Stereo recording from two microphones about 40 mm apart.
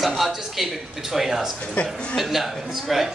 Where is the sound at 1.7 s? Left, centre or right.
Left.